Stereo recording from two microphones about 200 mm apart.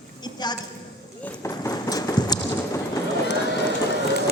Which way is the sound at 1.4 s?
15° left (ahead or behind).